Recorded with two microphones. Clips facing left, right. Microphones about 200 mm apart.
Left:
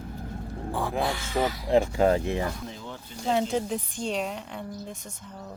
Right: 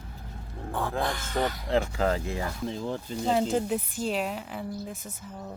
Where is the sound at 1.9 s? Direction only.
25° left (ahead or behind).